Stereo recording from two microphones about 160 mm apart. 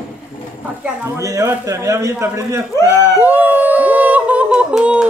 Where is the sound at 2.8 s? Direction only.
15° right (ahead or behind).